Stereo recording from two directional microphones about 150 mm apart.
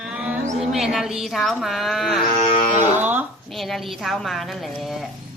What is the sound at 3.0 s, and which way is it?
Speech, 10° right (ahead or behind).